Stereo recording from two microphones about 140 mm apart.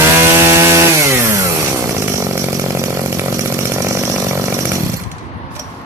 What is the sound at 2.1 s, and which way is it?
Chainsaw, 20° right (ahead or behind).